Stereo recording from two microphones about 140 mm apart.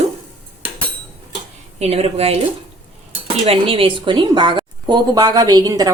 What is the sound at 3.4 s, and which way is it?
A woman's voice, 40° right (ahead or behind).